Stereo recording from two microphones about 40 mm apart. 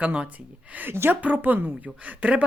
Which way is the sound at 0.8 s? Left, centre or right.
Right.